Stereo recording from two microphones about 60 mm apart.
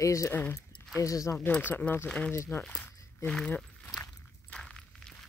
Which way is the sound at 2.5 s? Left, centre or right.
Left.